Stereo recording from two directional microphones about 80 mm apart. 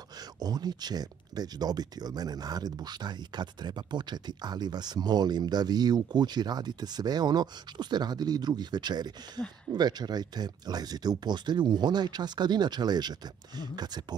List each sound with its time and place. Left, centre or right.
0.2 s speech: right